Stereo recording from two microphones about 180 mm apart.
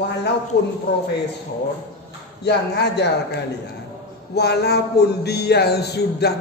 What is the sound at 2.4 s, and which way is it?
Speech, 70° left (ahead or behind).